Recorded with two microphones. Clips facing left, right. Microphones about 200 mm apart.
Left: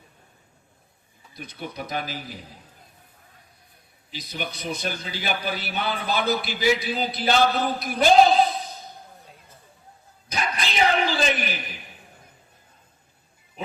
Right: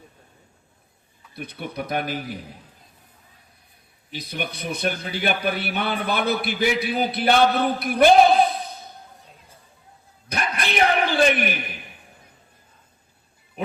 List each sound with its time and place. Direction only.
1.3 s a man's voice: 60° right (ahead or behind)
4.1 s a man's voice: 60° right (ahead or behind)
10.2 s a sound: 60° right (ahead or behind)